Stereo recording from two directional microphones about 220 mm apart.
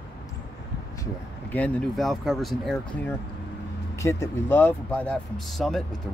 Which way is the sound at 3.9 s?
15° left (ahead or behind).